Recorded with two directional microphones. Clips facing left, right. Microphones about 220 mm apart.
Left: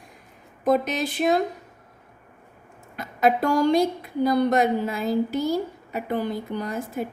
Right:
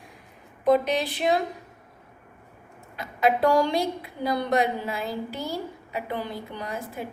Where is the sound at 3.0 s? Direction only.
45° left (ahead or behind).